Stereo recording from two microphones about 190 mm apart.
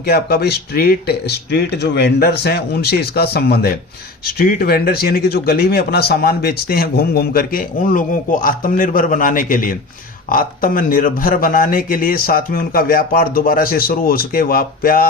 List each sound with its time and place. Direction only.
0.0 s speech: 55° left (ahead or behind)